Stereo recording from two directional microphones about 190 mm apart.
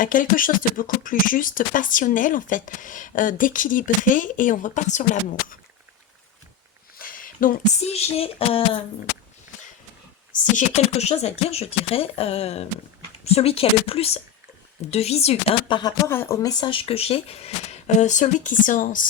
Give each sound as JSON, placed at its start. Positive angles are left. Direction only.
{"t": 0.0, "sound": "speech", "side_deg": 45}
{"t": 6.9, "sound": "speech", "side_deg": 45}
{"t": 10.3, "sound": "speech", "side_deg": 40}